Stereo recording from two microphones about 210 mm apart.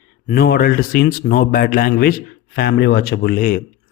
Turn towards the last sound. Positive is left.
turn(degrees=40)  # may be behind; listen again after turning